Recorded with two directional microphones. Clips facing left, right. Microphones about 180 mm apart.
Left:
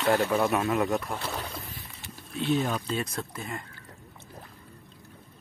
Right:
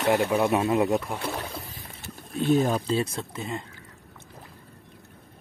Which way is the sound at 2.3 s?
45° right (ahead or behind).